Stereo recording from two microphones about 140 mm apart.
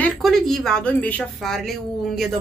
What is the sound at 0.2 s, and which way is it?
A woman's voice, centre (ahead or behind).